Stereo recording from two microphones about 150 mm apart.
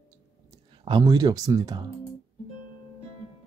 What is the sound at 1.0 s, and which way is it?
Speech, 25° right (ahead or behind).